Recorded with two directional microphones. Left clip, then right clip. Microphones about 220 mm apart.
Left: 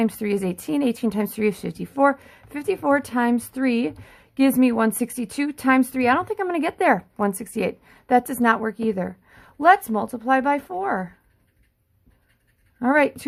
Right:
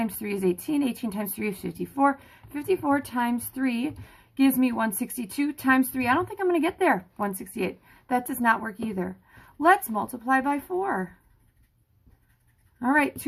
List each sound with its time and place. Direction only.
0.0 s speech: 40° left (ahead or behind)
12.8 s speech: 40° left (ahead or behind)